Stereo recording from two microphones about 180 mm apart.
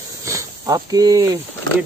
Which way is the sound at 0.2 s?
15° right (ahead or behind).